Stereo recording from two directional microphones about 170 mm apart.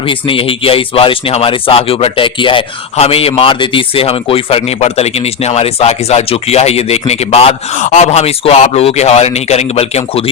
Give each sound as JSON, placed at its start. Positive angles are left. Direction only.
{"t": 0.1, "sound": "speech", "side_deg": 30}